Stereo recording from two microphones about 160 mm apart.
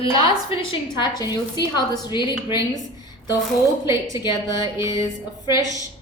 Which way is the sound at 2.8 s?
25° left (ahead or behind).